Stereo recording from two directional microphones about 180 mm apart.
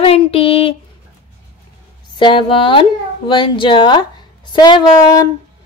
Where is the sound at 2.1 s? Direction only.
25° left (ahead or behind).